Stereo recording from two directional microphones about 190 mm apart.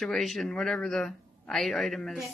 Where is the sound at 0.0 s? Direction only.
Centre (ahead or behind).